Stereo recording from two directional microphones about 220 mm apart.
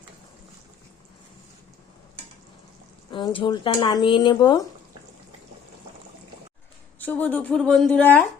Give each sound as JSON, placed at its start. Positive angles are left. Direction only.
{"t": 3.1, "sound": "speech", "side_deg": 20}
{"t": 7.0, "sound": "a woman's voice", "side_deg": 5}